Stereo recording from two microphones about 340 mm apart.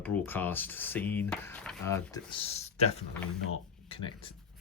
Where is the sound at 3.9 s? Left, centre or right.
Centre.